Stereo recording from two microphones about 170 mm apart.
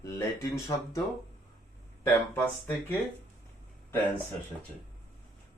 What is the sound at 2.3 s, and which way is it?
Speech, 10° left (ahead or behind).